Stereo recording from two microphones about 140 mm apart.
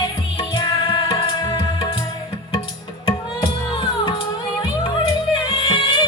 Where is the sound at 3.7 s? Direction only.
40° left (ahead or behind).